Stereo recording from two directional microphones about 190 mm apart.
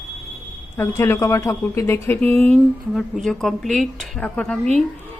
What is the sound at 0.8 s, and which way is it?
Speech, 15° left (ahead or behind).